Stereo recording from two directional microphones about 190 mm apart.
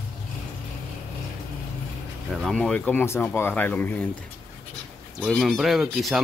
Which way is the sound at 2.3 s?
Centre (ahead or behind).